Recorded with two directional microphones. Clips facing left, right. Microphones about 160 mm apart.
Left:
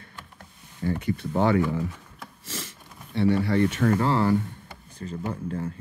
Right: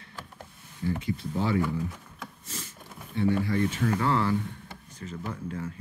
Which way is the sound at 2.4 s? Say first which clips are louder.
Left 8 dB; 90° left.